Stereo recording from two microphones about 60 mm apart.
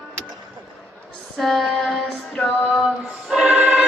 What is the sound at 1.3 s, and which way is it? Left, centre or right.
Music, centre.